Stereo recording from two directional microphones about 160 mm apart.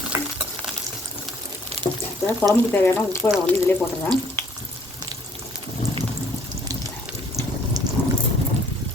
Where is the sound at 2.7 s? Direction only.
15° left (ahead or behind).